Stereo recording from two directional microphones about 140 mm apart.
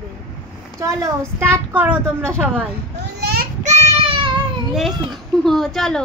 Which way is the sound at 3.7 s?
40° right (ahead or behind).